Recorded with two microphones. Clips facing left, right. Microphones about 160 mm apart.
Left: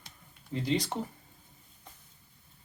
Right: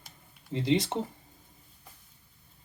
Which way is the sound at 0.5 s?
20° right (ahead or behind).